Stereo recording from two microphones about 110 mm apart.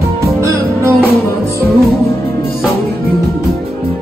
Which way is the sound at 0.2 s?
25° right (ahead or behind).